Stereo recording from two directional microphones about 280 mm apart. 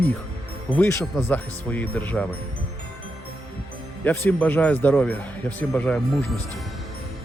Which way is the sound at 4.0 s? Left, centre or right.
Centre.